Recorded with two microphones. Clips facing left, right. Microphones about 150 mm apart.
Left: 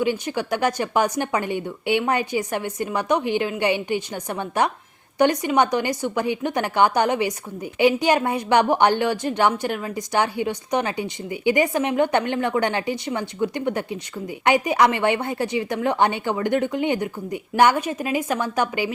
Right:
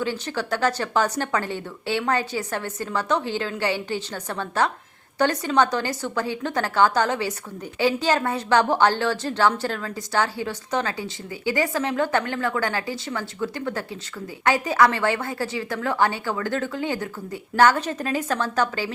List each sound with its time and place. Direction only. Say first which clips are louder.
0.0 s a woman's voice: left 4 dB; 15° left (ahead or behind)